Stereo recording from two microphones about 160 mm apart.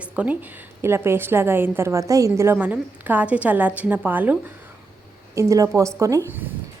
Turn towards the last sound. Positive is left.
turn(degrees=-15)  # may be behind; listen again after turning